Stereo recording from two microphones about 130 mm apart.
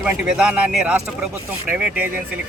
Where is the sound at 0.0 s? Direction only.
5° right (ahead or behind).